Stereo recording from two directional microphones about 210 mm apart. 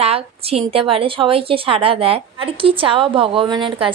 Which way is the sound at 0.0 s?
30° right (ahead or behind).